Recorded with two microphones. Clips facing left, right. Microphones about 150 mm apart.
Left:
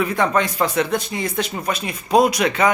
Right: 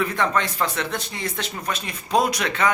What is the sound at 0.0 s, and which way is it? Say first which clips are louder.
Speech: left 4 dB; 10° left (ahead or behind).